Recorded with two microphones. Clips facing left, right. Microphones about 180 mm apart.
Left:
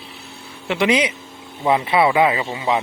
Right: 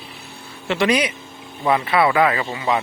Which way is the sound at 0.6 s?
15° left (ahead or behind).